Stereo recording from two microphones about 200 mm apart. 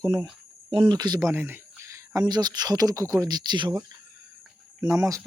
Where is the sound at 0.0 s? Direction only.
20° right (ahead or behind).